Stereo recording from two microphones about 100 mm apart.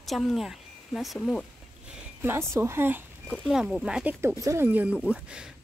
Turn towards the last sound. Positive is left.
turn(degrees=-10)  # may be behind; listen again after turning